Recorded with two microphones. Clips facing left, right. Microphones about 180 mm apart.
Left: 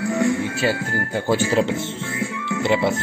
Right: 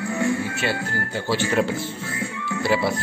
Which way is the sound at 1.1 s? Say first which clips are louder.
Left 4 dB; 50° left (ahead or behind).